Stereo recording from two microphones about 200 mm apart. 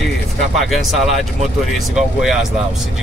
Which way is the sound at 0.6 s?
Centre (ahead or behind).